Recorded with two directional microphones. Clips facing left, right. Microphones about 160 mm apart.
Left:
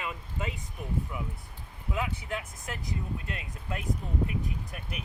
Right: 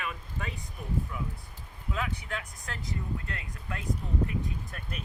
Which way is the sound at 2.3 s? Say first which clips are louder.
Left 2 dB; 20° left (ahead or behind).